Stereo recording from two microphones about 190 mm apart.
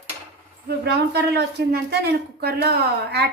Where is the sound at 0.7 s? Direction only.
60° right (ahead or behind).